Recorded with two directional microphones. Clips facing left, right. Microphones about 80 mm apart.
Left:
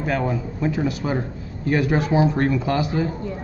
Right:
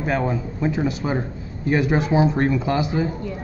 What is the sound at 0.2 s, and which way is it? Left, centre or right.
Speech, right.